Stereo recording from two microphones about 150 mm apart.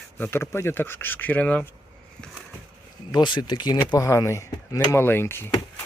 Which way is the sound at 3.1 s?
30° left (ahead or behind).